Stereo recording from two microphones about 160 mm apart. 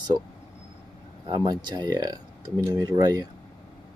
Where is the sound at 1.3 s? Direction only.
25° right (ahead or behind).